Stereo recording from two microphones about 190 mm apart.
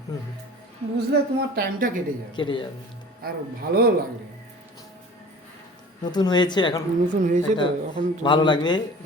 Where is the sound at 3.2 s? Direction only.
55° right (ahead or behind).